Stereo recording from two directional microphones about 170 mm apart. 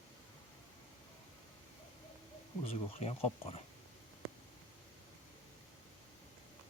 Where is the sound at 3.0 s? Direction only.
35° left (ahead or behind).